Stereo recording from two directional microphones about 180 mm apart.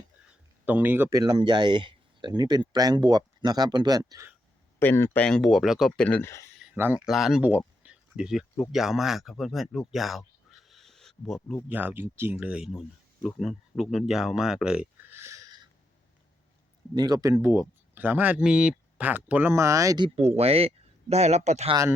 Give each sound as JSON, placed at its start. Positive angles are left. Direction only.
{"t": 0.6, "sound": "speech", "side_deg": -10}
{"t": 1.2, "sound": "speech", "side_deg": -25}
{"t": 4.8, "sound": "speech", "side_deg": 15}
{"t": 6.7, "sound": "speech", "side_deg": -10}
{"t": 11.7, "sound": "speech", "side_deg": -10}
{"t": 16.9, "sound": "speech", "side_deg": -20}
{"t": 20.1, "sound": "speech", "side_deg": -35}